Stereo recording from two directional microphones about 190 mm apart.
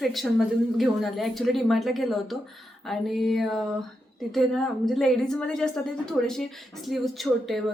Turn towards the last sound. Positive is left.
turn(degrees=0)  # may be behind; listen again after turning